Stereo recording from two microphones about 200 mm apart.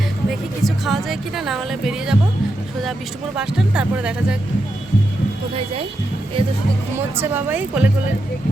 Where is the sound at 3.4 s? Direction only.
5° right (ahead or behind).